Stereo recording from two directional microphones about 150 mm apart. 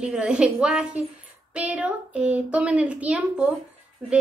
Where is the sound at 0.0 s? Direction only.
5° right (ahead or behind).